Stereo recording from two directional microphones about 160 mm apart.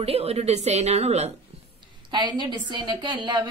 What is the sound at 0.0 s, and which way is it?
A woman's voice, 40° right (ahead or behind).